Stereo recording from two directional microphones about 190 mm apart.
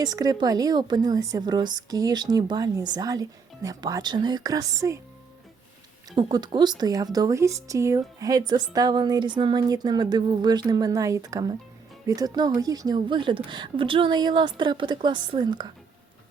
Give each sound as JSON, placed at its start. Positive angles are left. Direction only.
{"t": 0.0, "sound": "speech", "side_deg": -20}
{"t": 6.1, "sound": "speech", "side_deg": -20}